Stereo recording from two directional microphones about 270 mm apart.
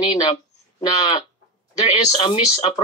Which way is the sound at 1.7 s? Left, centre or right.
Centre.